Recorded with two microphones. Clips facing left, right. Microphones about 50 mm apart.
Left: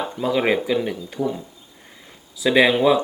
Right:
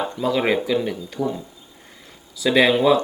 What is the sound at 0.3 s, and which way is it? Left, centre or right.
Speech, centre.